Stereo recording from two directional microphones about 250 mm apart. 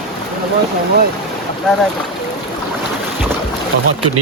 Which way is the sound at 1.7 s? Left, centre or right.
Centre.